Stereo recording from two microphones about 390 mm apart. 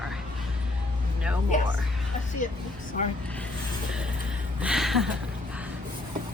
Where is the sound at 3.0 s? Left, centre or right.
Centre.